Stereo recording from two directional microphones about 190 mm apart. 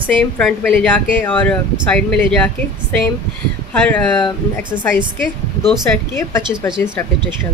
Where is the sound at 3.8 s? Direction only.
10° left (ahead or behind).